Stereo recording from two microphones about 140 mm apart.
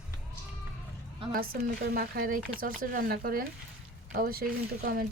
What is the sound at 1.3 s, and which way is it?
Speech, 90° right.